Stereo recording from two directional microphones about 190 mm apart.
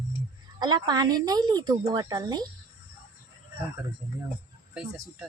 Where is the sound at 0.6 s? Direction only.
20° right (ahead or behind).